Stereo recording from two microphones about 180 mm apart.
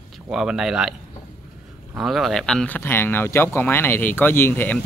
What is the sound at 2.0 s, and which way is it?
Speech, centre (ahead or behind).